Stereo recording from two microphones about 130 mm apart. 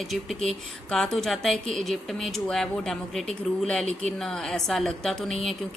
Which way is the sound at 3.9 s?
60° right (ahead or behind).